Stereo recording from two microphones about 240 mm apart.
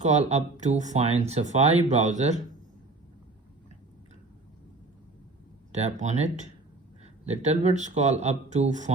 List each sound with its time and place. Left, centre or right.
0.0 s speech: right
5.7 s speech: right